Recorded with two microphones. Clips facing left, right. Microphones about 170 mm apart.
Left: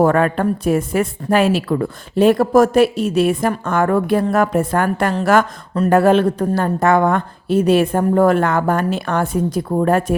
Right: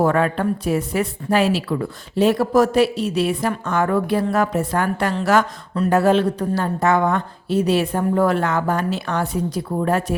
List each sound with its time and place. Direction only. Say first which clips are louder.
0.0 s a woman's voice: left 3 dB; 50° left (ahead or behind)